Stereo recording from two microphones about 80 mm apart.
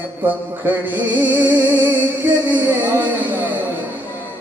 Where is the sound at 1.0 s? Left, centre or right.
Right.